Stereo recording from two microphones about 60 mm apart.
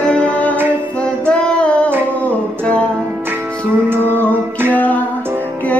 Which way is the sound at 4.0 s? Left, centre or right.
Left.